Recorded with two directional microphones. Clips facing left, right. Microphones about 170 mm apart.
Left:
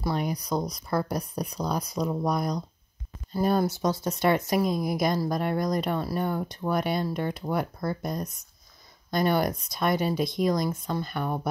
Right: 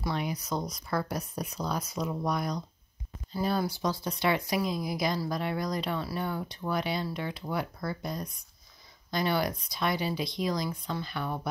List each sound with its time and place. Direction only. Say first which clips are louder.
0.0 s a woman's voice: left 4 dB; 40° left (ahead or behind)